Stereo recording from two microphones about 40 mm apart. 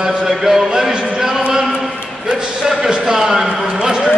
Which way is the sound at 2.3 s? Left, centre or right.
Centre.